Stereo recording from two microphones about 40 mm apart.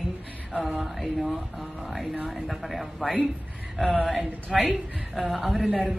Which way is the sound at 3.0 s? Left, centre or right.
Centre.